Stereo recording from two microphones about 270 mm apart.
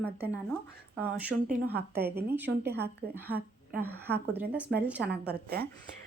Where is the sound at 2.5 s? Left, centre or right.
Right.